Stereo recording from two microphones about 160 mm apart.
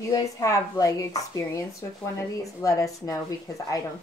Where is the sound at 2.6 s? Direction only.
20° left (ahead or behind).